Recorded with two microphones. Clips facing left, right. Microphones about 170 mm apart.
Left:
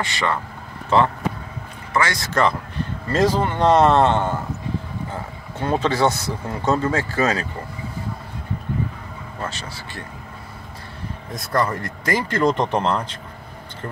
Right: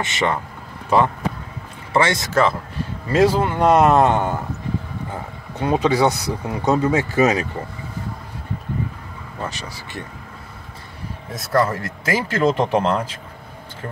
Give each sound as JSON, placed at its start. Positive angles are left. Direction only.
{"t": 0.0, "sound": "speech", "side_deg": -20}
{"t": 3.1, "sound": "speech", "side_deg": -10}
{"t": 5.6, "sound": "speech", "side_deg": -15}
{"t": 9.4, "sound": "speech", "side_deg": -15}
{"t": 11.3, "sound": "speech", "side_deg": -5}